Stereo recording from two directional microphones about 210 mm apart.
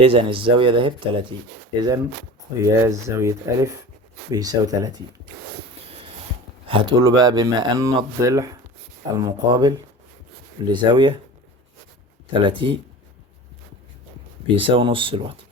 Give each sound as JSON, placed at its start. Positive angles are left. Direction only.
{"t": 0.0, "sound": "speech", "side_deg": -25}
{"t": 2.6, "sound": "speech", "side_deg": -15}
{"t": 6.7, "sound": "speech", "side_deg": -25}
{"t": 12.3, "sound": "speech", "side_deg": -25}
{"t": 14.4, "sound": "speech", "side_deg": -25}